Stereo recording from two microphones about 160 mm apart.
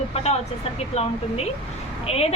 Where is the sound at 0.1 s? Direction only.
40° left (ahead or behind).